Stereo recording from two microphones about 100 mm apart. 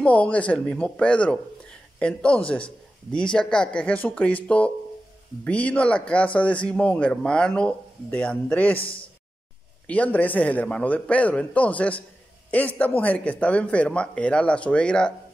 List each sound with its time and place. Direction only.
0.0 s speech: 10° left (ahead or behind)
8.7 s a man's voice: 65° left (ahead or behind)
9.8 s speech: 15° left (ahead or behind)